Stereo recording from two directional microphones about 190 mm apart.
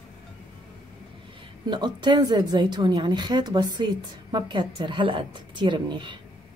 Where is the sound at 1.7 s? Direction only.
25° right (ahead or behind).